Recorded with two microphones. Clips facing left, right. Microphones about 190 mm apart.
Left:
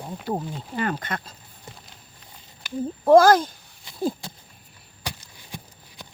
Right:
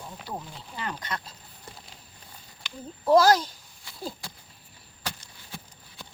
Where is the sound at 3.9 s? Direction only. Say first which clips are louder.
Left 11 dB; 20° left (ahead or behind).